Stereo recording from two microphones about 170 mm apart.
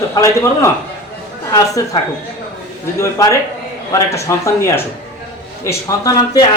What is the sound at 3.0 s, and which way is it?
Speech, 15° left (ahead or behind).